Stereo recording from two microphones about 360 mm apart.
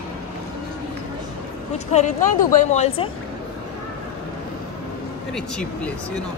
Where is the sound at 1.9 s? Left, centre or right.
Centre.